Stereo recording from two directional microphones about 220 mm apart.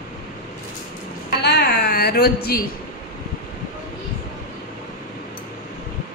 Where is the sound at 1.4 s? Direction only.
50° left (ahead or behind).